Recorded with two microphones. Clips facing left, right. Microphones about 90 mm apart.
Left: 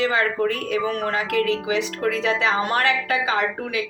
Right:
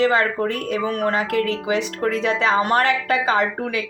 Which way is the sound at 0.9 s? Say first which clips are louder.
Right 3 dB; 20° right (ahead or behind).